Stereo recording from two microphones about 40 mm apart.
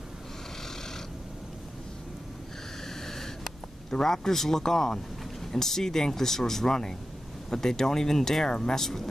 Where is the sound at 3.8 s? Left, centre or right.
Centre.